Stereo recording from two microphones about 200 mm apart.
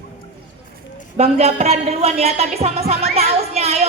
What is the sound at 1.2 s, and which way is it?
A woman's voice, 30° right (ahead or behind).